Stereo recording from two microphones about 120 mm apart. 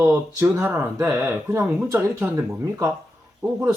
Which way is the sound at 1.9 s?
25° right (ahead or behind).